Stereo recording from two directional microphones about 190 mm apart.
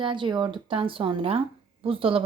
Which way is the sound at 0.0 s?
25° right (ahead or behind).